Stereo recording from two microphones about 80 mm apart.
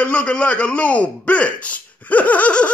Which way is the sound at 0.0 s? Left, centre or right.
Centre.